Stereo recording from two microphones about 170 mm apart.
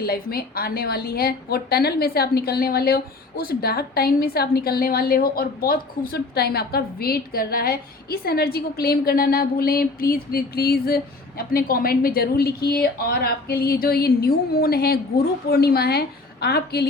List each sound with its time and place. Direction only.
0.0 s a woman's voice: 60° left (ahead or behind)